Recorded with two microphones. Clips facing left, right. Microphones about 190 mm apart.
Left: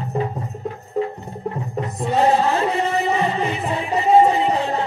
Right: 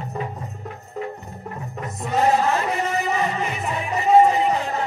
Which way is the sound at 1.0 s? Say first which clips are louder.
Left 7 dB; 30° left (ahead or behind).